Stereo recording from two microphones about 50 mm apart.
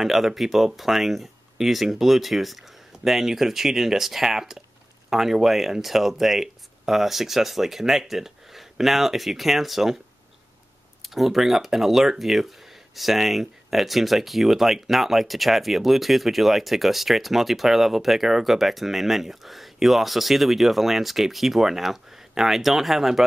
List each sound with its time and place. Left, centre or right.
0.0 s speech: centre
11.0 s speech: centre